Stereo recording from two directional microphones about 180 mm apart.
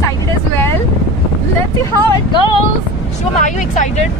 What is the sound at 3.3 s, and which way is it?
Speech, 45° left (ahead or behind).